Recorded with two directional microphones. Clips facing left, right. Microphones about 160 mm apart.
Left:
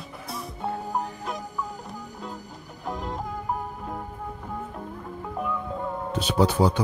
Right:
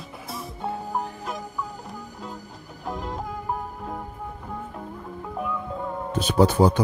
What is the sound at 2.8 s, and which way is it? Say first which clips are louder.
Music: even; centre (ahead or behind).